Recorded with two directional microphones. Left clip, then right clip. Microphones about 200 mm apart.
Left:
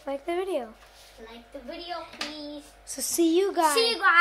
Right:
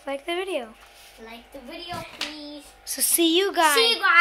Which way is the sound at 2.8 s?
5° left (ahead or behind).